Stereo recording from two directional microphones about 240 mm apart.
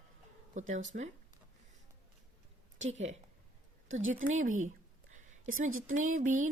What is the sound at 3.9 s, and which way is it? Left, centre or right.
Speech, right.